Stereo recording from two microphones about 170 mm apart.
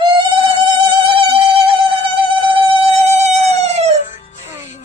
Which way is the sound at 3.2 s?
40° right (ahead or behind).